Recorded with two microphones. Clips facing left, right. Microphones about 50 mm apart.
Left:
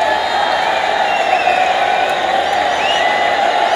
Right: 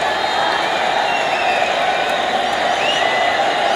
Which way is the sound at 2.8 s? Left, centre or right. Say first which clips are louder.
Left 2 dB; centre.